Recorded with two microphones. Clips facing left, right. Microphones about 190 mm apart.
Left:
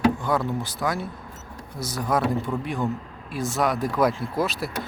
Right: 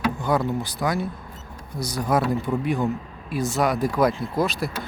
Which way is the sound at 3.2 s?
Centre (ahead or behind).